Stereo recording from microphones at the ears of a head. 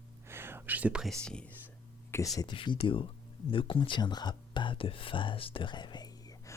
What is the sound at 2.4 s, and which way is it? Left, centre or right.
Speech, left.